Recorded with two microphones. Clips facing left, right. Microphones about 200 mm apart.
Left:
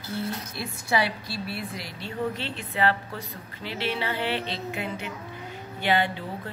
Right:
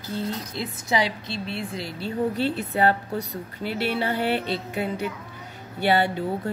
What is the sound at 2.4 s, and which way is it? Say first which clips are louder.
A woman's voice: right 5 dB; 40° right (ahead or behind).